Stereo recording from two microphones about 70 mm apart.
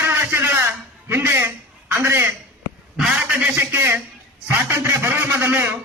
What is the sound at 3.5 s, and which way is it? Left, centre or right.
Speech, right.